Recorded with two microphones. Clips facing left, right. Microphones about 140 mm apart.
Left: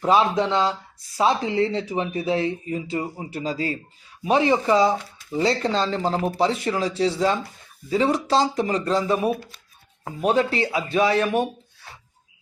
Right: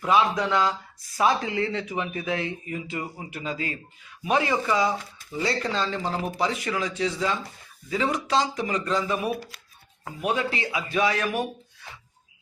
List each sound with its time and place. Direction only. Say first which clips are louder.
0.0 s speech: left 3 dB; 30° left (ahead or behind)